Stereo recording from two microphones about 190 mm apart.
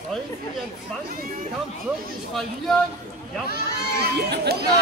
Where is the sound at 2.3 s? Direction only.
Centre (ahead or behind).